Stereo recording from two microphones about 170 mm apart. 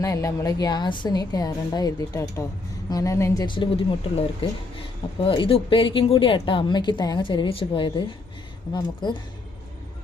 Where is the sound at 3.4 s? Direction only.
30° left (ahead or behind).